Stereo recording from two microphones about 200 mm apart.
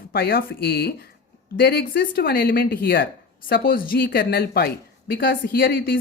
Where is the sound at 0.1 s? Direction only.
50° left (ahead or behind).